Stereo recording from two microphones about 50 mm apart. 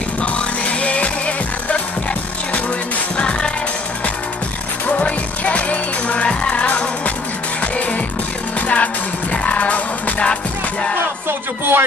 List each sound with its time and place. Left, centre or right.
0.2 s music: left
3.2 s music: left
4.8 s music: left
11.2 s speech: right